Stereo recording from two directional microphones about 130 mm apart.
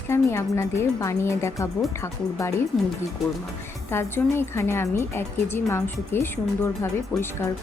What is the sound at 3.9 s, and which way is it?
Speech, 20° left (ahead or behind).